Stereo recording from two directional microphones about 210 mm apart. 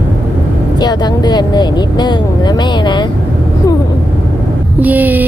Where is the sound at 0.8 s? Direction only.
20° left (ahead or behind).